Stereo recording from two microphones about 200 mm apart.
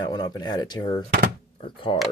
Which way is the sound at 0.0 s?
20° left (ahead or behind).